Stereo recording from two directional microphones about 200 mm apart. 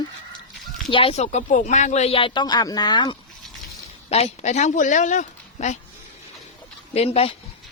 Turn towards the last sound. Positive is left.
turn(degrees=30)  # may be behind; listen again after turning